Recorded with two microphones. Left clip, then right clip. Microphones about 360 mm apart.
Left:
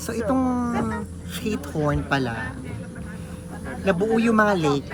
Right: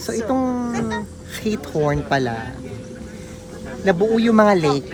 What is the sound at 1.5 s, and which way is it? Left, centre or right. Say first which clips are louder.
Speech: right 5 dB; centre.